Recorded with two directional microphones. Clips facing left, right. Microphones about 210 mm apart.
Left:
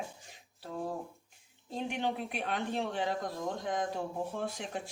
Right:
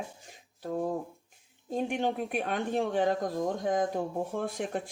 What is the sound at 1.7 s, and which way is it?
Speech, 50° right (ahead or behind).